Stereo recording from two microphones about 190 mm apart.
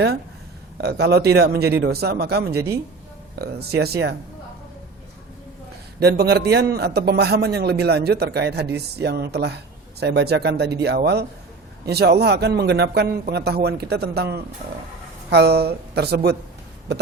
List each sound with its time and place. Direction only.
0.8 s a man's voice: 60° right (ahead or behind)
6.0 s a man's voice: 55° right (ahead or behind)